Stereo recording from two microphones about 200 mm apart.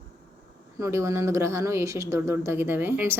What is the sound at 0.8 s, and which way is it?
Speech, 15° right (ahead or behind).